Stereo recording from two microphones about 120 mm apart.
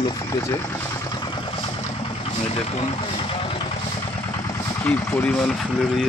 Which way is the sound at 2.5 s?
60° left (ahead or behind).